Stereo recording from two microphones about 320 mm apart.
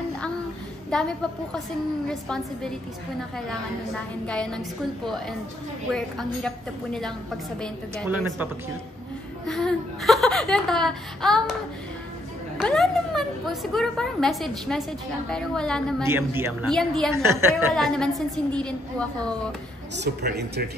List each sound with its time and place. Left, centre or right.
0.8 s a woman's voice: centre
4.3 s a woman's voice: centre
5.9 s a woman's voice: centre
9.5 s a woman's voice: centre
12.5 s a woman's voice: centre
20.0 s a woman's voice: right